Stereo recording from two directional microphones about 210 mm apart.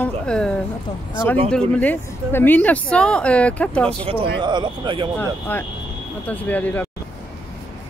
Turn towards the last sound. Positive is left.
turn(degrees=10)  # may be behind; listen again after turning